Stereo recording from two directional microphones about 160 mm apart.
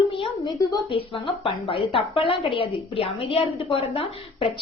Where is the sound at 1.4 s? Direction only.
35° left (ahead or behind).